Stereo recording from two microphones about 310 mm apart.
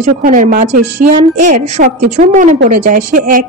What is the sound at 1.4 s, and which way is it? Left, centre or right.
A woman's voice, right.